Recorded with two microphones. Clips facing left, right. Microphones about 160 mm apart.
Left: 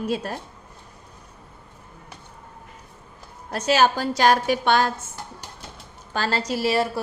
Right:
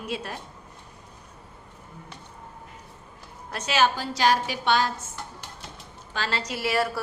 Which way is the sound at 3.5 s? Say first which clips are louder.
Left 4 dB; 40° left (ahead or behind).